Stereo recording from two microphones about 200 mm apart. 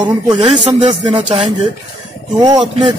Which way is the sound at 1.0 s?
35° right (ahead or behind).